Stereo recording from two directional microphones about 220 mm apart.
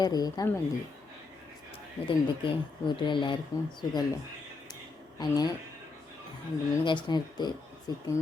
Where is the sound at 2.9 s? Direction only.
20° left (ahead or behind).